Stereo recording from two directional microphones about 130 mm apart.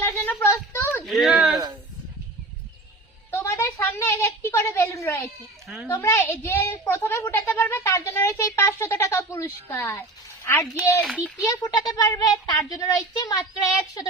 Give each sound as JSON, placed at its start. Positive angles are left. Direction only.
{"t": 0.0, "sound": "a sound", "side_deg": 15}
{"t": 1.0, "sound": "speech", "side_deg": 0}
{"t": 3.3, "sound": "a woman's voice", "side_deg": 20}
{"t": 5.6, "sound": "a child's voice", "side_deg": 0}
{"t": 5.9, "sound": "a woman's voice", "side_deg": 20}
{"t": 11.0, "sound": "a child's voice", "side_deg": -5}
{"t": 11.4, "sound": "a woman's voice", "side_deg": 25}